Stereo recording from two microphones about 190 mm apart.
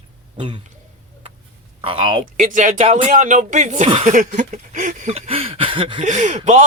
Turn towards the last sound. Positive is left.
turn(degrees=-40)  # may be behind; listen again after turning